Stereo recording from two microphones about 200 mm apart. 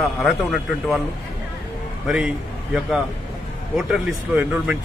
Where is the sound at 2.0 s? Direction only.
5° right (ahead or behind).